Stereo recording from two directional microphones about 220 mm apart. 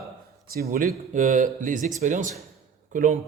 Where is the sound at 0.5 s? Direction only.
40° right (ahead or behind).